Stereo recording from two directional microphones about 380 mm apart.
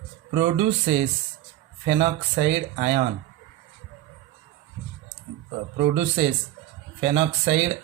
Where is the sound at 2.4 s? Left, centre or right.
Right.